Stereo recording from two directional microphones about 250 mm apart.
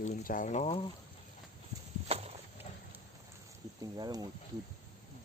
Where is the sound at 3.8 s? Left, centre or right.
Centre.